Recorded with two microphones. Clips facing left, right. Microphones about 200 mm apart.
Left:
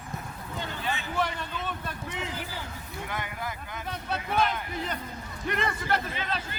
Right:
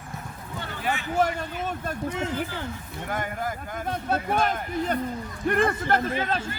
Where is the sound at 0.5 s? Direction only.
15° left (ahead or behind).